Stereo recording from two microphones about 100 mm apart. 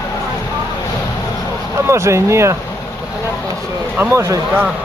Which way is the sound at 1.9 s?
30° right (ahead or behind).